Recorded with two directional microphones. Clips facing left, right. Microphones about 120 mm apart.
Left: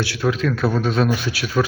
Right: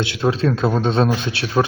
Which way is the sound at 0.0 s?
25° right (ahead or behind).